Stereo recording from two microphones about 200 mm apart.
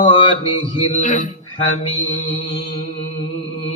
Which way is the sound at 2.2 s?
30° left (ahead or behind).